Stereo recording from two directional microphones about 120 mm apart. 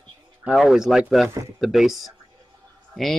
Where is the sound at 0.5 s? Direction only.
5° right (ahead or behind).